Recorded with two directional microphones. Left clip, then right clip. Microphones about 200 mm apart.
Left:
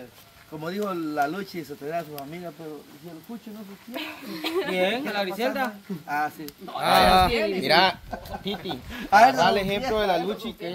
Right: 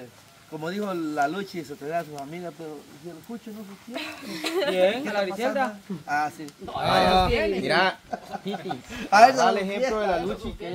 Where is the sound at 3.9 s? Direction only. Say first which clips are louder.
Even; 20° right (ahead or behind).